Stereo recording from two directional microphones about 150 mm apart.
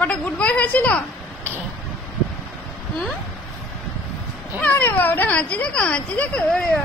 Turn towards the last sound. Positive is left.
turn(degrees=10)  # may be behind; listen again after turning